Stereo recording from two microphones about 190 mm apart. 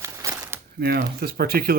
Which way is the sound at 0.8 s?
55° right (ahead or behind).